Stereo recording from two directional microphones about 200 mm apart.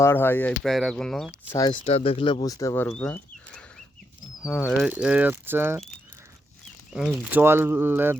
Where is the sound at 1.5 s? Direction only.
20° left (ahead or behind).